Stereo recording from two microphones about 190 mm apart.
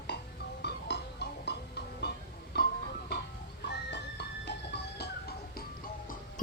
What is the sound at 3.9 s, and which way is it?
Music, 65° left (ahead or behind).